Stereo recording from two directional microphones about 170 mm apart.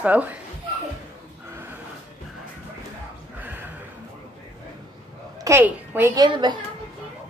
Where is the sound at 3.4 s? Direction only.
10° right (ahead or behind).